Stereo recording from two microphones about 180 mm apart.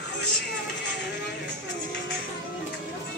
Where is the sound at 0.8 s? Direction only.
75° left (ahead or behind).